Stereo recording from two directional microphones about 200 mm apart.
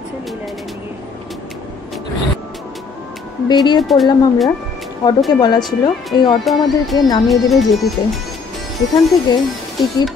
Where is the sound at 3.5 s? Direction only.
20° left (ahead or behind).